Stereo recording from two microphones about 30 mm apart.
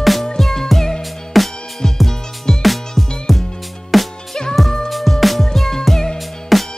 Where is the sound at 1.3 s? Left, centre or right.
Centre.